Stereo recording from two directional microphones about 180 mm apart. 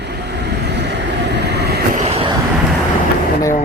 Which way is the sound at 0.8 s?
70° right (ahead or behind).